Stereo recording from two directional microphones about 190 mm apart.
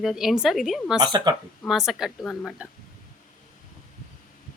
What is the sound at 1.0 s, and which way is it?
Speech, 20° right (ahead or behind).